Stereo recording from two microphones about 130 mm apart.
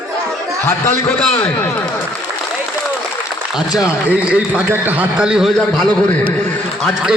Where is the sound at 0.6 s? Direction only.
15° left (ahead or behind).